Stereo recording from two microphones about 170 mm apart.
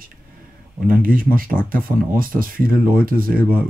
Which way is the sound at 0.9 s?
55° right (ahead or behind).